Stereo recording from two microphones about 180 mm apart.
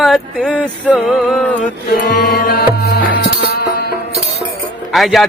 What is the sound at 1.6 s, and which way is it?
Music, 60° left (ahead or behind).